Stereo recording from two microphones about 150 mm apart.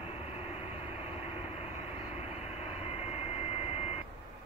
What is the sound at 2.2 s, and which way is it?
Vehicle, 45° left (ahead or behind).